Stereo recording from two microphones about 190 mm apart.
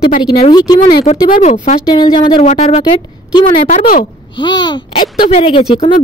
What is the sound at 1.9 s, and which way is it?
Speech, 25° left (ahead or behind).